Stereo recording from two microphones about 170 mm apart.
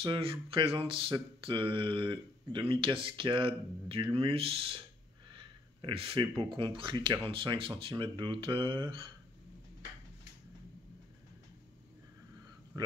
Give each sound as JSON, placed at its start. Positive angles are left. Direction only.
{"t": 0.0, "sound": "speech", "side_deg": -30}
{"t": 12.7, "sound": "a man's voice", "side_deg": -25}